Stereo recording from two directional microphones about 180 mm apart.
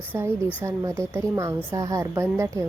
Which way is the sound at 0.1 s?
10° right (ahead or behind).